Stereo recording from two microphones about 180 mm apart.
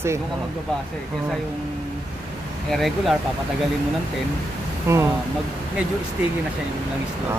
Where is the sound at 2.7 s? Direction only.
Centre (ahead or behind).